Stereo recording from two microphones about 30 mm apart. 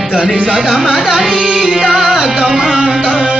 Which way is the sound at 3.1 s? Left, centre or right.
Right.